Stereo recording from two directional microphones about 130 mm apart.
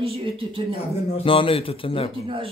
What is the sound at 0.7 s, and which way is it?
A man's voice, 50° left (ahead or behind).